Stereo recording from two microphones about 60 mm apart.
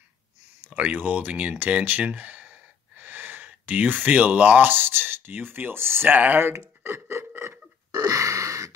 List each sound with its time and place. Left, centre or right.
0.7 s speech: right
6.1 s speech: right
6.8 s a sound: right
7.9 s gasp: right